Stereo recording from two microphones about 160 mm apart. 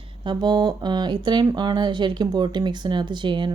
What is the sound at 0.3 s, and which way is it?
Speech, 25° right (ahead or behind).